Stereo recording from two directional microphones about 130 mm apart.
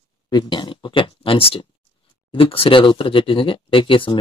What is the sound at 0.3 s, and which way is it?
Speech, 35° left (ahead or behind).